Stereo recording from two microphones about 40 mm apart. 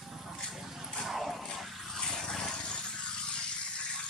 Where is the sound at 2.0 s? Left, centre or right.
Centre.